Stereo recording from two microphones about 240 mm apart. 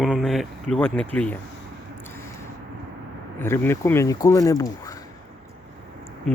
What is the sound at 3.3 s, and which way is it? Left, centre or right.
Speech, centre.